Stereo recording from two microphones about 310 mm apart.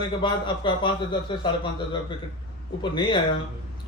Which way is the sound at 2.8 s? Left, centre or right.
Centre.